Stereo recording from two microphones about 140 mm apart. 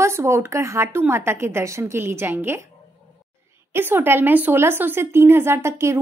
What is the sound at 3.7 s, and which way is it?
Speech, 15° right (ahead or behind).